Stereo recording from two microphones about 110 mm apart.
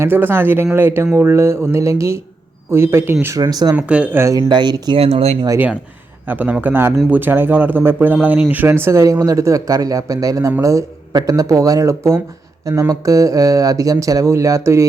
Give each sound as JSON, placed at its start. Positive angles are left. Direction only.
{"t": 0.0, "sound": "speech", "side_deg": -20}
{"t": 3.5, "sound": "speech", "side_deg": -35}
{"t": 3.8, "sound": "speech", "side_deg": -10}
{"t": 4.2, "sound": "speech", "side_deg": -30}
{"t": 4.4, "sound": "speech", "side_deg": -40}
{"t": 4.9, "sound": "speech", "side_deg": -65}
{"t": 6.2, "sound": "speech", "side_deg": -15}